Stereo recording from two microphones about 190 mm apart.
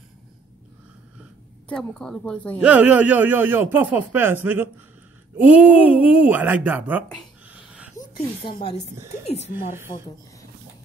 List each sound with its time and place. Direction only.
1.7 s speech: 5° left (ahead or behind)
2.6 s speech: 5° right (ahead or behind)
7.4 s a sound: 5° right (ahead or behind)
8.4 s speech: 25° left (ahead or behind)
9.5 s speech: 10° right (ahead or behind)